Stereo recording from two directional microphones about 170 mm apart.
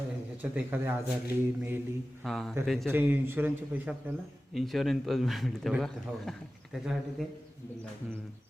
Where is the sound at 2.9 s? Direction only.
10° right (ahead or behind).